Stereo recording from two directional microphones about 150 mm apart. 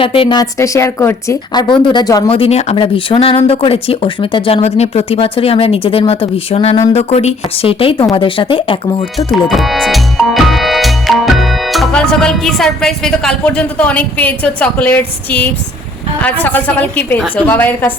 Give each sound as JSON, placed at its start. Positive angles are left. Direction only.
{"t": 0.0, "sound": "a woman's voice", "side_deg": 35}
{"t": 2.3, "sound": "speech", "side_deg": 40}
{"t": 2.7, "sound": "speech", "side_deg": 35}
{"t": 9.1, "sound": "music", "side_deg": 0}
{"t": 16.2, "sound": "a woman's voice", "side_deg": 10}